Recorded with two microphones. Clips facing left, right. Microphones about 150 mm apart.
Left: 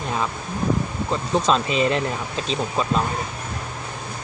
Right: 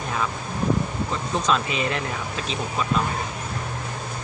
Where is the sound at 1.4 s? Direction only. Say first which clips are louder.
Left 3 dB; 30° left (ahead or behind).